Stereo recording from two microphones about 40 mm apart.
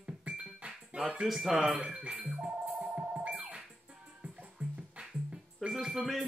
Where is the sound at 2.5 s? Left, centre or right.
Right.